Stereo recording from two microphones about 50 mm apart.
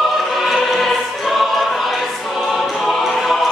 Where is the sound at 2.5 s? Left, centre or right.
Centre.